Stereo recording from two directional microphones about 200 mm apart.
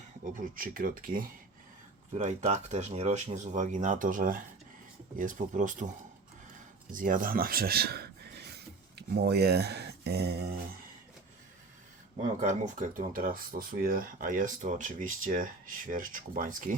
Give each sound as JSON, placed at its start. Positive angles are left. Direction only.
{"t": 0.3, "sound": "speech", "side_deg": -45}
{"t": 6.9, "sound": "speech", "side_deg": -45}
{"t": 12.4, "sound": "speech", "side_deg": -40}